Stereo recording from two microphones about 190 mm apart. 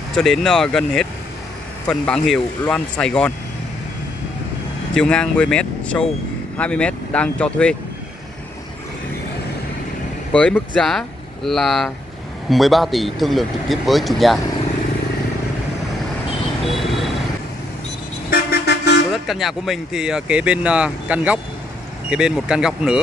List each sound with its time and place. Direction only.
0.1 s speech: centre (ahead or behind)
4.9 s speech: 5° left (ahead or behind)
10.3 s speech: 5° left (ahead or behind)
16.6 s vehicle: centre (ahead or behind)
18.3 s vehicle: 60° left (ahead or behind)
19.1 s speech: centre (ahead or behind)